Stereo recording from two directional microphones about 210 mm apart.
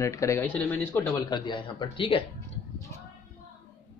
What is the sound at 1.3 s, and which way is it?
Speech, 20° left (ahead or behind).